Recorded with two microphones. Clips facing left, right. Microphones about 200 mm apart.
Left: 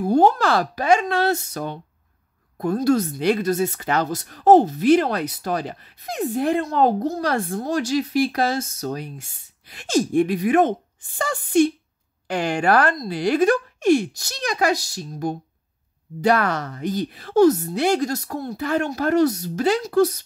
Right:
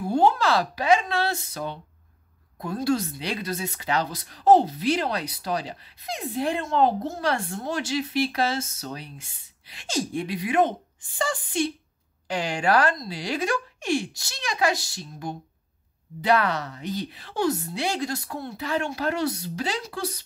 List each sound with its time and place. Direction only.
0.0 s a woman's voice: 40° left (ahead or behind)
6.6 s a woman's voice: 40° left (ahead or behind)
16.2 s a woman's voice: 45° left (ahead or behind)